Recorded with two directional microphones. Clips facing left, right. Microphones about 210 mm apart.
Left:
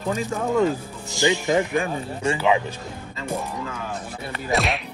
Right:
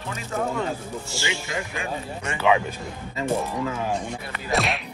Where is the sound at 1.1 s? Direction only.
15° left (ahead or behind).